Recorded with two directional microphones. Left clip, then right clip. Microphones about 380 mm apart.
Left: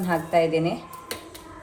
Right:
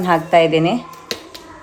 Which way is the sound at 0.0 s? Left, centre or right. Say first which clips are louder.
Right 9 dB; right.